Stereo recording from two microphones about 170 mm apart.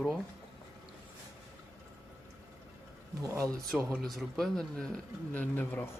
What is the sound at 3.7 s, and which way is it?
Speech, centre (ahead or behind).